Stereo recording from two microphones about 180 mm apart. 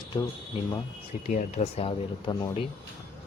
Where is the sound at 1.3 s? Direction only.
40° left (ahead or behind).